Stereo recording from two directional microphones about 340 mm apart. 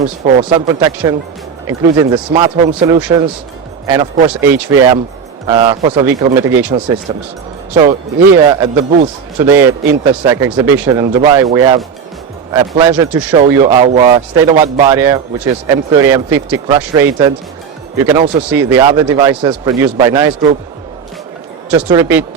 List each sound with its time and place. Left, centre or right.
0.0 s speech: centre
21.7 s speech: centre